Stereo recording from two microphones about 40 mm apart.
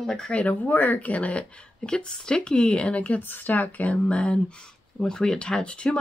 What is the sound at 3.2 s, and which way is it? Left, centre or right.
Speech, left.